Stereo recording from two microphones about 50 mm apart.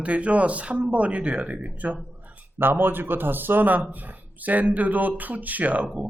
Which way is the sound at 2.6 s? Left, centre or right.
Right.